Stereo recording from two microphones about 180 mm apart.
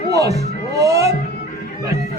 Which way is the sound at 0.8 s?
20° right (ahead or behind).